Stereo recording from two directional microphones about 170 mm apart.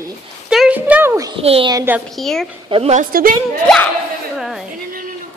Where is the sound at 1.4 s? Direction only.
35° right (ahead or behind).